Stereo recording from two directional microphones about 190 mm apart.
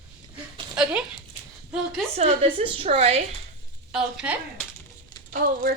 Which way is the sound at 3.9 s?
5° right (ahead or behind).